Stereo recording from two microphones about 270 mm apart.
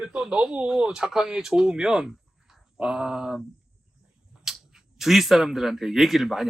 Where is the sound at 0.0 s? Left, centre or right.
Centre.